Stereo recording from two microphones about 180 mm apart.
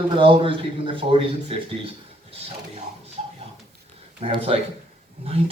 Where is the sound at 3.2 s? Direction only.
35° right (ahead or behind).